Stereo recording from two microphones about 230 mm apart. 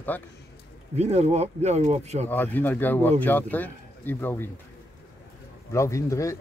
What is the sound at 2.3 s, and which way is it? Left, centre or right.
Speech, centre.